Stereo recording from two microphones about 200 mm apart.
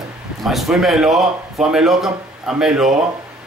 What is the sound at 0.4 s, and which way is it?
A man's voice, centre (ahead or behind).